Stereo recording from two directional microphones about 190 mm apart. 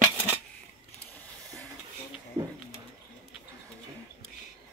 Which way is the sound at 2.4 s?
20° right (ahead or behind).